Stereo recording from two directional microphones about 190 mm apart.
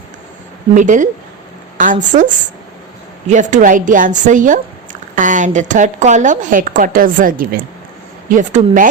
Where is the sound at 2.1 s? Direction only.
40° right (ahead or behind).